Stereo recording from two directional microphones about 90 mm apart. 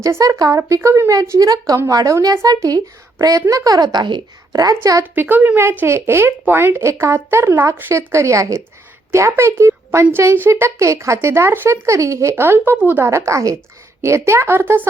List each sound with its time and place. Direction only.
0.0 s a woman's voice: 35° right (ahead or behind); by 4.2 s 55° right (ahead or behind)
4.5 s a woman's voice: 45° right (ahead or behind)
5.1 s a woman's voice: 20° right (ahead or behind)
13.1 s a woman's voice: 35° right (ahead or behind)